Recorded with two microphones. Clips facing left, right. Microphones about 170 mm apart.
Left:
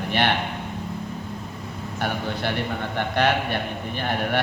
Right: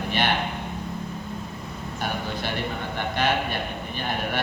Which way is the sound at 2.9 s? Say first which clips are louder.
Left 3 dB; 60° left (ahead or behind).